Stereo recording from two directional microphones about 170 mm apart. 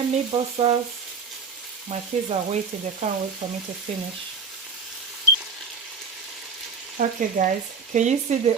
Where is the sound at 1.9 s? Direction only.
40° right (ahead or behind).